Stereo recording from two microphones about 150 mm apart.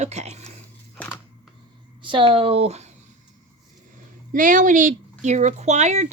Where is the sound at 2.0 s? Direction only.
35° right (ahead or behind).